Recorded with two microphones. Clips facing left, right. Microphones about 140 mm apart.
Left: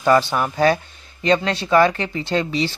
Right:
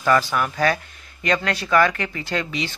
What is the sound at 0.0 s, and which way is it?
Speech, 30° left (ahead or behind).